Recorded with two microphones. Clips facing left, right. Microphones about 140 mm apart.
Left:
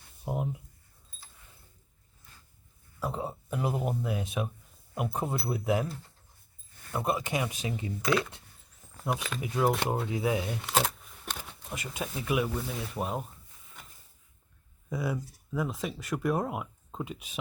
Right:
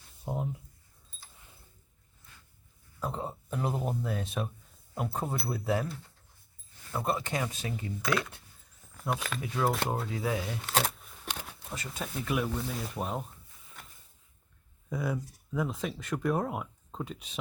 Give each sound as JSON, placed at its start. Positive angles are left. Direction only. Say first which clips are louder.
{"t": 0.3, "sound": "speech", "louder": "left 2 dB", "side_deg": 15}
{"t": 3.0, "sound": "speech", "louder": "left 2 dB", "side_deg": 10}
{"t": 6.9, "sound": "speech", "louder": "left 1 dB", "side_deg": 15}
{"t": 9.4, "sound": "speech", "louder": "left 4 dB", "side_deg": 15}
{"t": 14.8, "sound": "speech", "louder": "even", "side_deg": 5}